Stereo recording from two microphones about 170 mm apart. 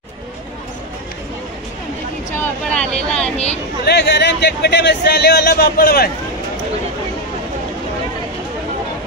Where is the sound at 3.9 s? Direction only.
75° left (ahead or behind).